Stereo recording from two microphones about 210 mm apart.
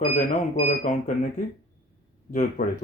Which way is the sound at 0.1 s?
35° left (ahead or behind).